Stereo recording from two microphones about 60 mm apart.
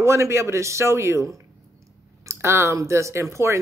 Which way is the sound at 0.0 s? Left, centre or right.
Right.